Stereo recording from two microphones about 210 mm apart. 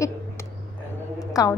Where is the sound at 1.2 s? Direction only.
15° left (ahead or behind).